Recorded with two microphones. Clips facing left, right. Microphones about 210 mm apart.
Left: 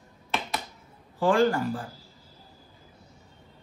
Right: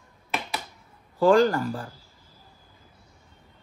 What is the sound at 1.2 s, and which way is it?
Speech, 45° right (ahead or behind).